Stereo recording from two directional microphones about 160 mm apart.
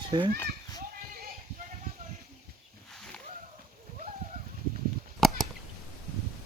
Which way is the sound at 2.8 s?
5° left (ahead or behind).